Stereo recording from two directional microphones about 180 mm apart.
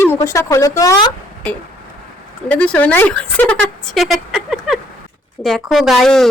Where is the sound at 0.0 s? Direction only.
15° left (ahead or behind).